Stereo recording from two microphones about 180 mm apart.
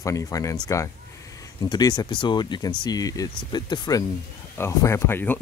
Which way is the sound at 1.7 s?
20° left (ahead or behind).